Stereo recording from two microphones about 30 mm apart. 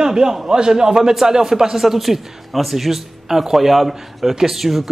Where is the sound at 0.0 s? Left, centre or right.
Right.